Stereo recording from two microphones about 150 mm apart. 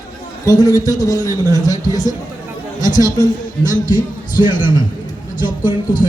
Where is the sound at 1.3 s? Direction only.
20° right (ahead or behind).